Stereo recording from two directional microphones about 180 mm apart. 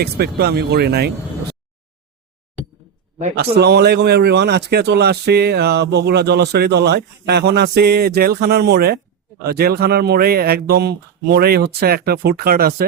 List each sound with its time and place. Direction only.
0.0 s speech: 60° right (ahead or behind)
3.3 s speech: 65° right (ahead or behind)